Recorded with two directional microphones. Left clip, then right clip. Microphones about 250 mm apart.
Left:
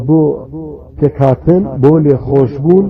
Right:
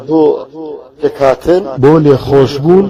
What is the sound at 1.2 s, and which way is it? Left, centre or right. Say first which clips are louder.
A man's voice: right 3 dB; right.